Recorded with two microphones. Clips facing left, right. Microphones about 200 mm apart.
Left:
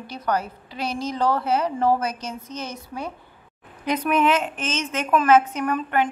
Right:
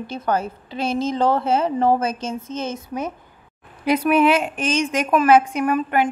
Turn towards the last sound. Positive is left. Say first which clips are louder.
# right 3 dB
turn(degrees=-10)  # may be behind; listen again after turning